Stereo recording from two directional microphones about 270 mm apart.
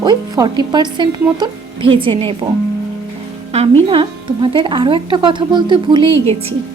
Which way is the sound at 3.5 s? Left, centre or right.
Right.